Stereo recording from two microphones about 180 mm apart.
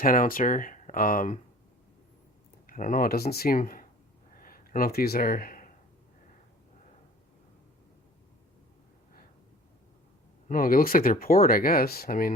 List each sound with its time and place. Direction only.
0.0 s speech: 50° left (ahead or behind)
2.6 s speech: 50° left (ahead or behind)
4.4 s a sound: 50° left (ahead or behind)
10.5 s speech: 50° left (ahead or behind)